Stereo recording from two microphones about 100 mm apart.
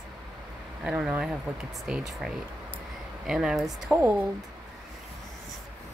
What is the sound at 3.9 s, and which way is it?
Speech, 15° right (ahead or behind).